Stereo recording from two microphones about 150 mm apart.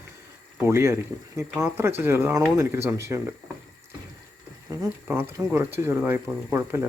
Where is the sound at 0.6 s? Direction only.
20° right (ahead or behind).